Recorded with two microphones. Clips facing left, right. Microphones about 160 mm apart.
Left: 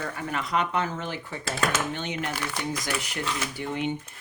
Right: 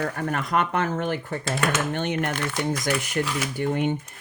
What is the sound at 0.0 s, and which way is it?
Speech, 55° right (ahead or behind).